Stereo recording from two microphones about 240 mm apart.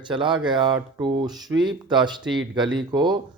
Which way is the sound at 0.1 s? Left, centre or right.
Centre.